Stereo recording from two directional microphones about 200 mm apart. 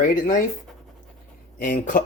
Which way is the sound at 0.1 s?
40° left (ahead or behind).